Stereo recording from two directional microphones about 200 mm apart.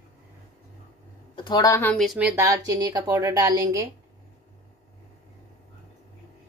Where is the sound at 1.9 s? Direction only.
Centre (ahead or behind).